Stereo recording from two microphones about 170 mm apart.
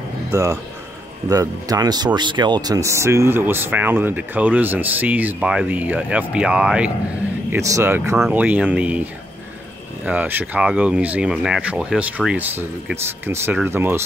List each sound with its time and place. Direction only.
0.3 s speech: 20° right (ahead or behind)